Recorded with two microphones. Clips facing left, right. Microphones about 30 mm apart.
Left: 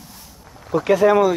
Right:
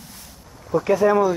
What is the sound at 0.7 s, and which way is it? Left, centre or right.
Speech, left.